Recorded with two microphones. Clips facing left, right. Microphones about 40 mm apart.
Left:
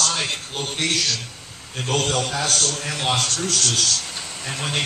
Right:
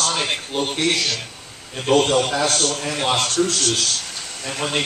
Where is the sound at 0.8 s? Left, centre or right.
Right.